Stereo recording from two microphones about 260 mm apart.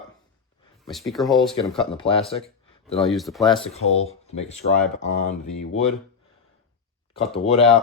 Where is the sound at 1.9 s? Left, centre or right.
Left.